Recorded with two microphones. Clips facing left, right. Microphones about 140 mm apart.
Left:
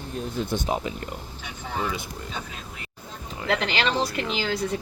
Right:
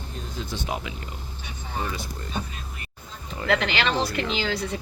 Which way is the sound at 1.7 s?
90° left.